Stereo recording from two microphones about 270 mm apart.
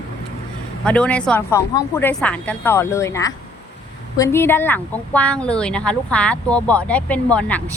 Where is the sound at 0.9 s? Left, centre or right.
Centre.